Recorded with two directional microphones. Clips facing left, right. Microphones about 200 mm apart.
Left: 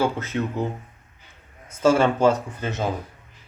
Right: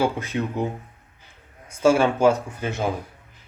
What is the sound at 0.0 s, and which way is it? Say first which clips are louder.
A man's voice: even; 15° right (ahead or behind).